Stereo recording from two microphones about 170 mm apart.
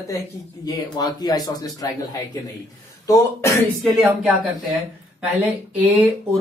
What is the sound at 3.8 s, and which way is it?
Speech, centre (ahead or behind).